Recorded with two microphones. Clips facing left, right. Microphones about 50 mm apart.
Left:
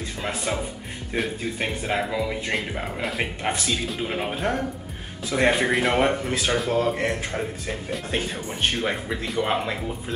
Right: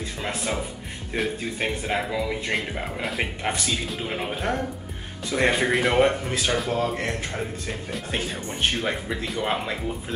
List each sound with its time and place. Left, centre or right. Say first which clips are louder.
0.2 s speech: left 1 dB; centre